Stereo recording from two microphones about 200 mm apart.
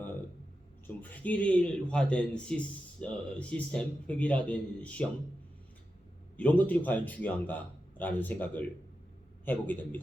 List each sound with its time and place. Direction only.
0.9 s a man's voice: 10° left (ahead or behind)
6.3 s a man's voice: 5° left (ahead or behind)